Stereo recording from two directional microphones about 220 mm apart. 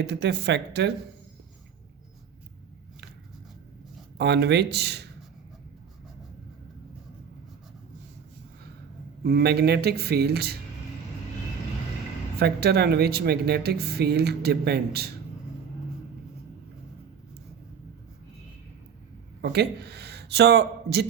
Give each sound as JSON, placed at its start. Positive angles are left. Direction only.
{"t": 0.0, "sound": "speech", "side_deg": -50}
{"t": 4.2, "sound": "speech", "side_deg": -50}
{"t": 9.2, "sound": "speech", "side_deg": -45}
{"t": 12.4, "sound": "speech", "side_deg": -45}
{"t": 19.4, "sound": "speech", "side_deg": -50}